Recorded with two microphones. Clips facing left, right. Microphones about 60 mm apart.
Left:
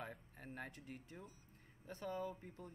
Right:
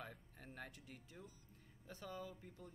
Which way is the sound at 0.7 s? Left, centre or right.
Left.